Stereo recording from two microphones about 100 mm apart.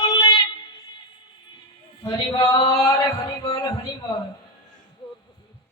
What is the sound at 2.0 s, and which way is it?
Male singing, 50° left (ahead or behind).